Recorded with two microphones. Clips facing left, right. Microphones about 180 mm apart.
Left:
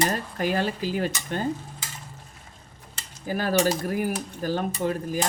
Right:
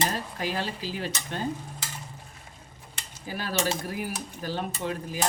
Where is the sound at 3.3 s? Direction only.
50° left (ahead or behind).